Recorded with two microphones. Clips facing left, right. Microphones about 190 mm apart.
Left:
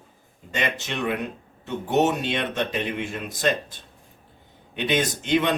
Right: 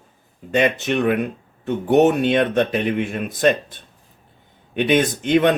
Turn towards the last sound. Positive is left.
turn(degrees=-55)  # may be behind; listen again after turning